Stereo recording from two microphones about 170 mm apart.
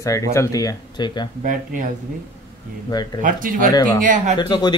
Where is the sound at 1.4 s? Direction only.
50° right (ahead or behind).